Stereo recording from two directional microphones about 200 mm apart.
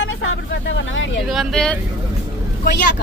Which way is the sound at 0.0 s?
75° left (ahead or behind).